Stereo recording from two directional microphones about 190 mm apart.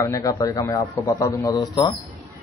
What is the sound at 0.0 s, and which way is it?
A man's voice, 20° left (ahead or behind).